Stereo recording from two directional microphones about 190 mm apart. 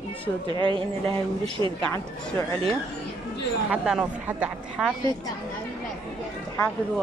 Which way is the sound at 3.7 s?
5° right (ahead or behind).